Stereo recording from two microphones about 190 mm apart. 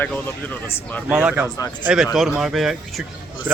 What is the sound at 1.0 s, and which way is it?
Speech, 5° right (ahead or behind).